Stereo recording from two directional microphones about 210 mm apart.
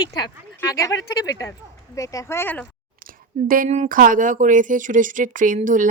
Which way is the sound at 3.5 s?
40° right (ahead or behind).